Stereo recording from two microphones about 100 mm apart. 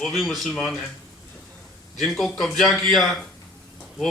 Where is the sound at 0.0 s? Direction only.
Centre (ahead or behind).